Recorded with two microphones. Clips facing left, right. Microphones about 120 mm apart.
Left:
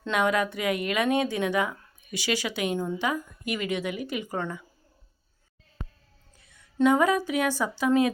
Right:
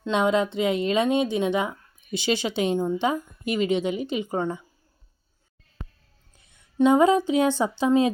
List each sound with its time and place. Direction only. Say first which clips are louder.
0.1 s speech: right 3 dB; 25° right (ahead or behind)
6.7 s speech: right 4 dB; 25° right (ahead or behind)